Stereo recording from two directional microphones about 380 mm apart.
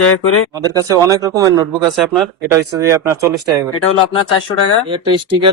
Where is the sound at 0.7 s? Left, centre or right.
Centre.